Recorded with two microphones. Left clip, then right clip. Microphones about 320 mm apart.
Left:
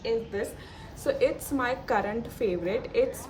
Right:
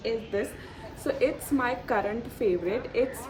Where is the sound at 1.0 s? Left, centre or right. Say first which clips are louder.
Left 1 dB; centre.